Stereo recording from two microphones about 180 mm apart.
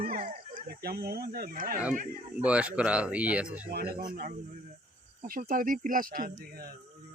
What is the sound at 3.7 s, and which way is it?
Speech, 60° right (ahead or behind).